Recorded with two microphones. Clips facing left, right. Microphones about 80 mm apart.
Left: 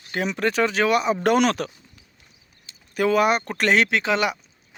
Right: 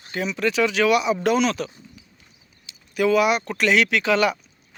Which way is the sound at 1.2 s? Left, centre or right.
Left.